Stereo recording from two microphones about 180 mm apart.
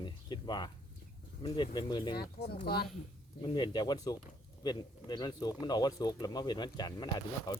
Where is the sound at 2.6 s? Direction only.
60° left (ahead or behind).